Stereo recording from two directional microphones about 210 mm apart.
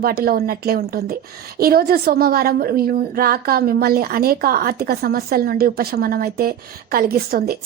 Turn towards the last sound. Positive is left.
turn(degrees=-45)  # may be behind; listen again after turning